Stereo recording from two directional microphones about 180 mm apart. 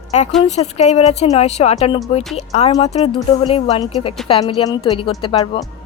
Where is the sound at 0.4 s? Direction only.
40° left (ahead or behind).